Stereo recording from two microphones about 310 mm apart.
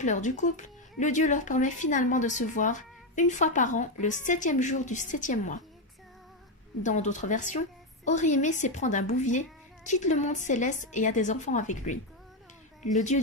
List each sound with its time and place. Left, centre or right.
0.0 s speech: left
6.8 s speech: left